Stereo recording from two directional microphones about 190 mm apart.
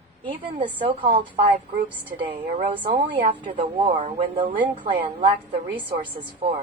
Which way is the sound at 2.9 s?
40° right (ahead or behind).